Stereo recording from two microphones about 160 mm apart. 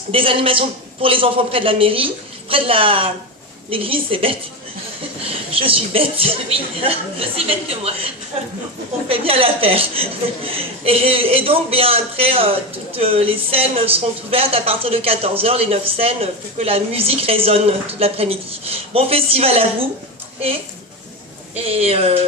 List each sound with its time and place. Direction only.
0.1 s a woman's voice: 35° right (ahead or behind)
5.5 s a woman's voice: 35° right (ahead or behind)
21.5 s a woman's voice: 40° right (ahead or behind)